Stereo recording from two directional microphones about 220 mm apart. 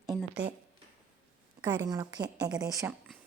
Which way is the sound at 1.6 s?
20° right (ahead or behind).